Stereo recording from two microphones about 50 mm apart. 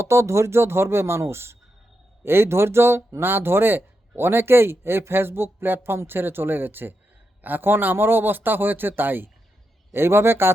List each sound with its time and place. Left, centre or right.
0.0 s speech: right
9.9 s speech: right